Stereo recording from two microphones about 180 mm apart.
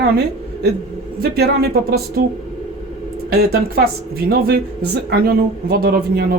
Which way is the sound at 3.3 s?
60° right (ahead or behind).